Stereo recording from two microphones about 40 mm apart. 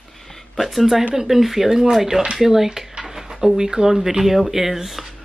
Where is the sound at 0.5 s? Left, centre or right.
Centre.